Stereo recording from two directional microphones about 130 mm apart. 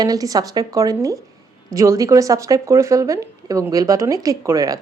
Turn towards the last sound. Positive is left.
turn(degrees=-25)  # may be behind; listen again after turning